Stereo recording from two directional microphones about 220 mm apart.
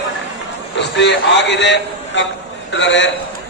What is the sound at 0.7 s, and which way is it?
A man's voice, 55° left (ahead or behind).